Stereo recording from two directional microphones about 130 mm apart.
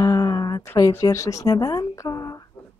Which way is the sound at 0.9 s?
25° left (ahead or behind).